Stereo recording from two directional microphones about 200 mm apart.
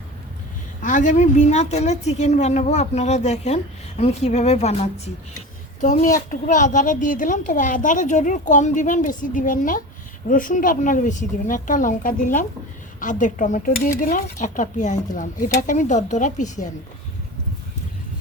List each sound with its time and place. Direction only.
0.8 s a woman's voice: 40° left (ahead or behind)